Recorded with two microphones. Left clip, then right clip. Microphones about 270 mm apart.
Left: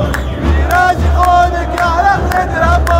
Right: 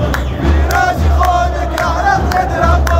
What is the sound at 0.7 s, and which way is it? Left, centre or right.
Music, left.